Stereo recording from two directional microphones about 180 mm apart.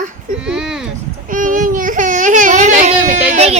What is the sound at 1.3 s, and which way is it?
Baby cry, 45° right (ahead or behind).